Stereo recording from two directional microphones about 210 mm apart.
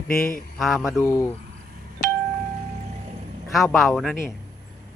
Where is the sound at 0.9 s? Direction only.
15° left (ahead or behind).